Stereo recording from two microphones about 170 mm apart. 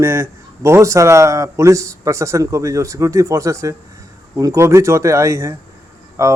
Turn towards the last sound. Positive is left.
turn(degrees=-15)  # may be behind; listen again after turning